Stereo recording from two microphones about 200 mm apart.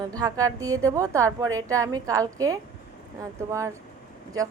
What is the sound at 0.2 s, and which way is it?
A woman's voice, 15° right (ahead or behind).